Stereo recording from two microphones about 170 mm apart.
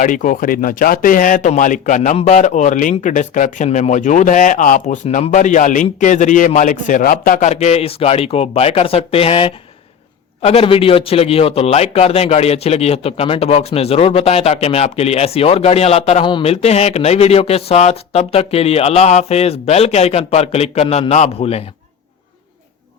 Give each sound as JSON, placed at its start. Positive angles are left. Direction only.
{"t": 0.0, "sound": "a man's voice", "side_deg": 50}